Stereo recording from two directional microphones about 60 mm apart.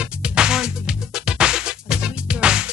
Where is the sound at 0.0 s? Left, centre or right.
Centre.